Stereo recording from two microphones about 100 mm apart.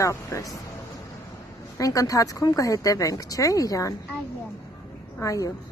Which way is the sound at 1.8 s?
35° left (ahead or behind).